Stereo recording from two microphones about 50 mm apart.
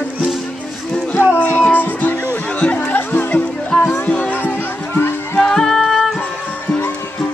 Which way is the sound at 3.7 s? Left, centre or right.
Centre.